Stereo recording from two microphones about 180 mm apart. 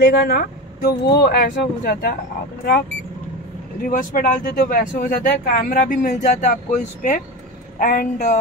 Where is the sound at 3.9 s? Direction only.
50° left (ahead or behind).